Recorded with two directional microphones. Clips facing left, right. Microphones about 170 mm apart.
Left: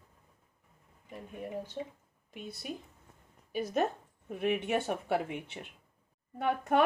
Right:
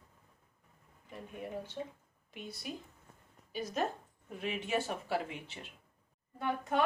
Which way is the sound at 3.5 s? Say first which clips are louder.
Left 5 dB; 60° left (ahead or behind).